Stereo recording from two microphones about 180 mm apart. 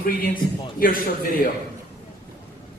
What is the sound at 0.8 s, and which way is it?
Speech, 50° left (ahead or behind).